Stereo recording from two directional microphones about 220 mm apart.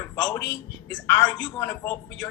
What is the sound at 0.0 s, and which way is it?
A man's voice, 10° left (ahead or behind).